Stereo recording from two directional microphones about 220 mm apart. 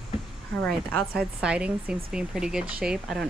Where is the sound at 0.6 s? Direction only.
Centre (ahead or behind).